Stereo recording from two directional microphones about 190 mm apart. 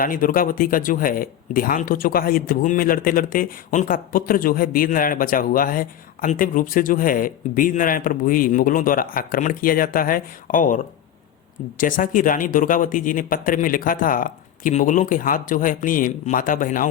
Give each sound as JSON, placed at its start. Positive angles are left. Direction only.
{"t": 0.0, "sound": "speech", "side_deg": 50}
{"t": 11.8, "sound": "speech", "side_deg": 45}